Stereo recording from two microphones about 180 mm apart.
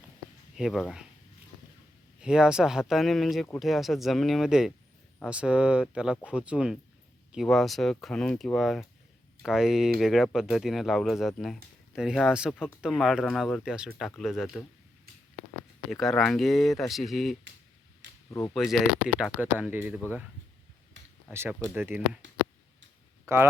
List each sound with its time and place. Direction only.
0.5 s speech: centre (ahead or behind)
2.2 s speech: 5° right (ahead or behind)
15.9 s speech: centre (ahead or behind)
18.3 s speech: 15° left (ahead or behind)
18.5 s speech: centre (ahead or behind)
21.3 s speech: 15° right (ahead or behind)
23.2 s speech: 15° right (ahead or behind)